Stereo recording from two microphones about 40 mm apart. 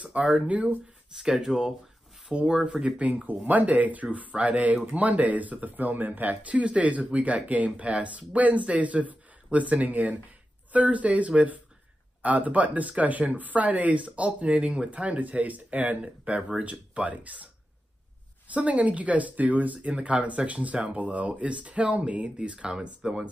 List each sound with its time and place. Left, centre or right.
0.0 s speech: right
1.1 s speech: centre; by 3.3 s right
3.3 s speech: right
16.0 s speech: right
18.5 s speech: right
22.8 s speech: centre